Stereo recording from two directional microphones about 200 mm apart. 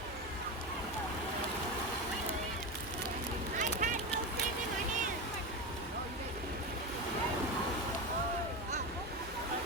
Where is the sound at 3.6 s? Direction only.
40° right (ahead or behind).